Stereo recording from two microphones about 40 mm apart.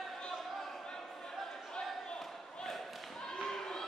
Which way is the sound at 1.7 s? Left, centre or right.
Centre.